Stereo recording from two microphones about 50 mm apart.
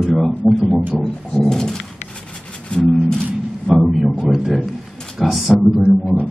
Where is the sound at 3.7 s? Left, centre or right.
Centre.